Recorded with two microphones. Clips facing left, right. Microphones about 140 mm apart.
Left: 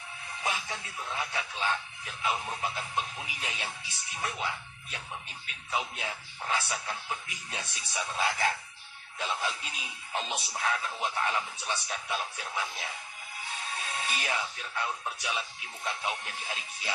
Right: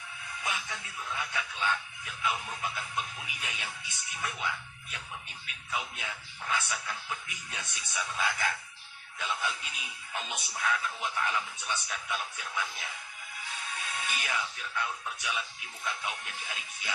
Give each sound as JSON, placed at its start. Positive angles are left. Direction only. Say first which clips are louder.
{"t": 0.3, "sound": "speech", "louder": "left 3 dB", "side_deg": 30}